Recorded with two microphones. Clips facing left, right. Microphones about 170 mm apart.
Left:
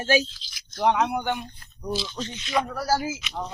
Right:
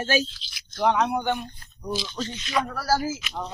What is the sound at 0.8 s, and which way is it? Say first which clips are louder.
Speech: even; 15° left (ahead or behind).